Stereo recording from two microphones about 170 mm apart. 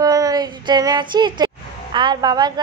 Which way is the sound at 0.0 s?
20° right (ahead or behind).